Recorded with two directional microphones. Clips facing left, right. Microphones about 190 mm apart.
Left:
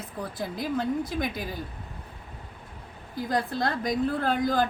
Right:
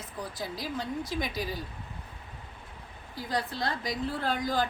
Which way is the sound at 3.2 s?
50° left (ahead or behind).